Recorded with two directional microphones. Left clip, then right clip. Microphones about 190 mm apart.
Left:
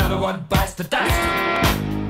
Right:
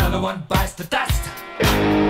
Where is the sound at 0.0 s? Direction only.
Centre (ahead or behind).